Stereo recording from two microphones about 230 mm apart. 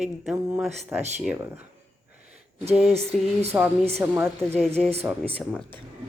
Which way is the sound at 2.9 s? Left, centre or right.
Right.